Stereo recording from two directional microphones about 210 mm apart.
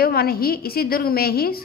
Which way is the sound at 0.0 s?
45° left (ahead or behind).